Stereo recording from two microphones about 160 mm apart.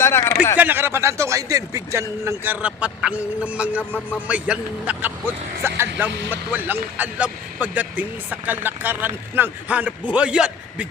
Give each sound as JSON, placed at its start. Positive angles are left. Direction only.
{"t": 0.0, "sound": "a sound", "side_deg": 15}
{"t": 0.6, "sound": "a man's voice", "side_deg": -10}
{"t": 3.8, "sound": "speech", "side_deg": 10}
{"t": 4.3, "sound": "a man's voice", "side_deg": -10}